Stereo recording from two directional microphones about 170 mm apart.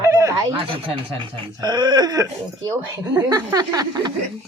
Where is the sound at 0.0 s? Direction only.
20° right (ahead or behind).